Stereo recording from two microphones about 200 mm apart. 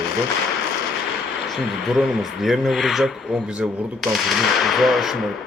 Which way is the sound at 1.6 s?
Centre (ahead or behind).